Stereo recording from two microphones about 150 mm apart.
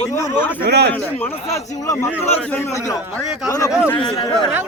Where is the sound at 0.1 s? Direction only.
20° left (ahead or behind).